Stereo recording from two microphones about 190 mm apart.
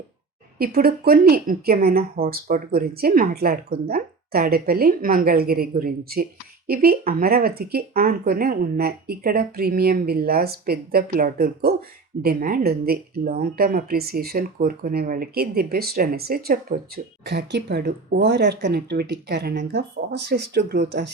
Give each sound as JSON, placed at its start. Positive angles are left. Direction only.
{"t": 0.6, "sound": "a woman's voice", "side_deg": -50}